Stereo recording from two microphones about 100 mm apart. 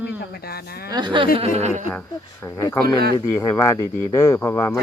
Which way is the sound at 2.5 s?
40° left (ahead or behind).